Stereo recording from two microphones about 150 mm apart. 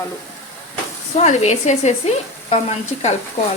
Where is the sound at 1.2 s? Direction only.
45° left (ahead or behind).